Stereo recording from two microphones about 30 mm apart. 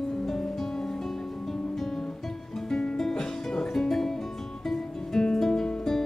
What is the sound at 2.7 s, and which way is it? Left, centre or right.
Music, left.